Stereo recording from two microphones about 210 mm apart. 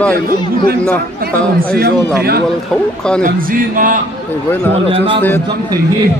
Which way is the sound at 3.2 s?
40° right (ahead or behind).